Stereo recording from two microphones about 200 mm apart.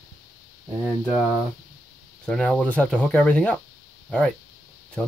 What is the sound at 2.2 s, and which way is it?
Speech, 5° left (ahead or behind).